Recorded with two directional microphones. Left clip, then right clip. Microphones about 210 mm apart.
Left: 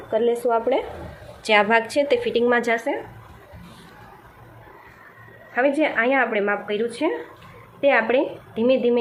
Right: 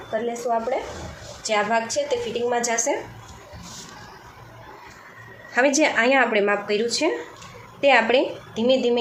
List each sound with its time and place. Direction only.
0.1 s a woman's voice: 45° left (ahead or behind)
5.5 s speech: 5° right (ahead or behind)